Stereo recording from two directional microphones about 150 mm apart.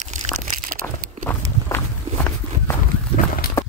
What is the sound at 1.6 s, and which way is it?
Walk, 15° left (ahead or behind).